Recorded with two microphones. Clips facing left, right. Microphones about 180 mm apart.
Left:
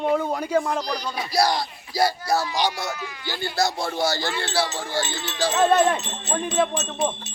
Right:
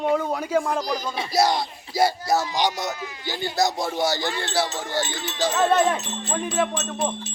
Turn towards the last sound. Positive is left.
turn(degrees=-5)  # may be behind; listen again after turning